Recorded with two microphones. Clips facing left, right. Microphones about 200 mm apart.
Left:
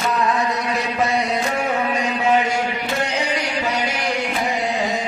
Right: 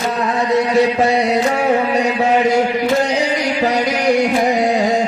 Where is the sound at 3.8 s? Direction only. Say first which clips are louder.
Right 9 dB; 40° right (ahead or behind).